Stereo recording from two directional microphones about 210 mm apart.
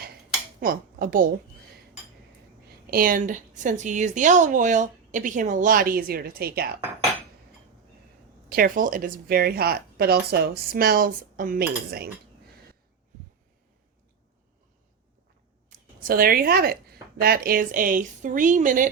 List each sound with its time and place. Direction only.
0.6 s a woman's voice: 45° right (ahead or behind)
2.9 s speech: 40° right (ahead or behind)
8.4 s a woman's voice: 45° right (ahead or behind)
15.7 s a woman's voice: 45° right (ahead or behind)